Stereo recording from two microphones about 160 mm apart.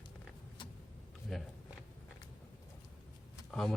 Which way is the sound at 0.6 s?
30° left (ahead or behind).